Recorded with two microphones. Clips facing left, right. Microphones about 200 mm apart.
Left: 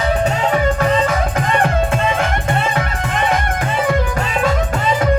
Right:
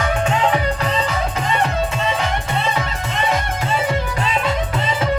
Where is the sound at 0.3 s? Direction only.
45° left (ahead or behind).